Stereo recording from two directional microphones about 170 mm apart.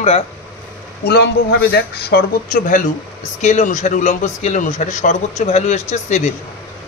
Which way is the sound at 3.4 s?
45° left (ahead or behind).